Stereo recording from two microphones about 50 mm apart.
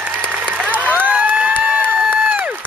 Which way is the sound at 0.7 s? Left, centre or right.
Right.